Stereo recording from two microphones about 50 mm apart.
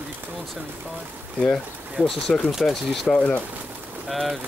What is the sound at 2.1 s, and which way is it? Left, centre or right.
Speech, centre.